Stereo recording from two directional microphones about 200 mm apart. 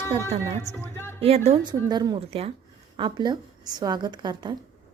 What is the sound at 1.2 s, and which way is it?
A woman's voice, 30° right (ahead or behind).